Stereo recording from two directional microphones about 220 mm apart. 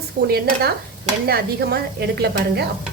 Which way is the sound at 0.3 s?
45° right (ahead or behind).